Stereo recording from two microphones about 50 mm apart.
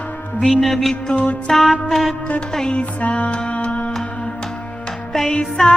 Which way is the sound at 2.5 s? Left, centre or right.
Centre.